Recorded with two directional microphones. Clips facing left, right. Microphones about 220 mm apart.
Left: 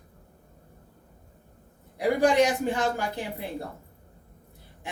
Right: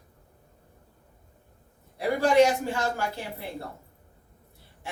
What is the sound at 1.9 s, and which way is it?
Speech, 15° left (ahead or behind).